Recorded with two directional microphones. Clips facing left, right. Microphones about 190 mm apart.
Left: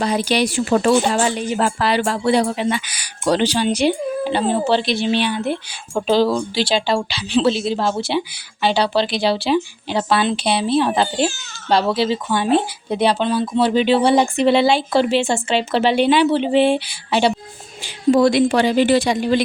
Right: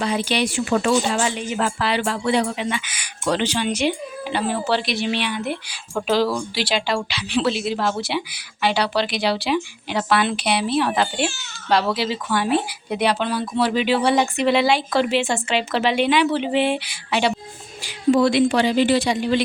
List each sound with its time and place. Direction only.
0.0 s speech: 40° left (ahead or behind)
18.1 s a woman's voice: 45° left (ahead or behind)